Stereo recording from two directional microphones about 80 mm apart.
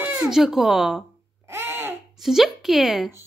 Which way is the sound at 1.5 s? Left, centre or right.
Right.